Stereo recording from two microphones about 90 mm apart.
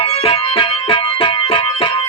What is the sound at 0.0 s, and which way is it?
Music, 90° left.